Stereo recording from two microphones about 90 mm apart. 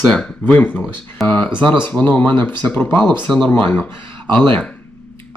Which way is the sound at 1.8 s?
15° left (ahead or behind).